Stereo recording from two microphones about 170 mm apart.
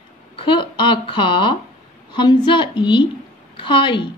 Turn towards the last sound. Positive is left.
turn(degrees=30)  # may be behind; listen again after turning